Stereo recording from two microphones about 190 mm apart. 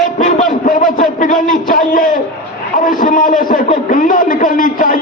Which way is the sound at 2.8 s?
45° left (ahead or behind).